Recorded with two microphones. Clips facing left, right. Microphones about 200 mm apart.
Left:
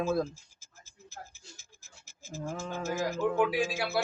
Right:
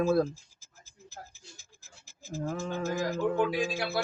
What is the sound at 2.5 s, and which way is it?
Speech, 40° right (ahead or behind).